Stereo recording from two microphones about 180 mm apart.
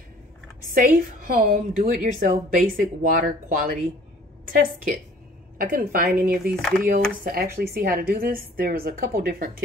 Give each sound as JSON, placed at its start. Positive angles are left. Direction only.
{"t": 0.7, "sound": "a woman's voice", "side_deg": -50}
{"t": 6.2, "sound": "speech", "side_deg": -5}
{"t": 7.2, "sound": "a woman's voice", "side_deg": -55}